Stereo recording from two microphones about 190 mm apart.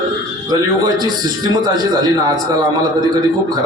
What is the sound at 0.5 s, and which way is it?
A man's voice, 20° right (ahead or behind).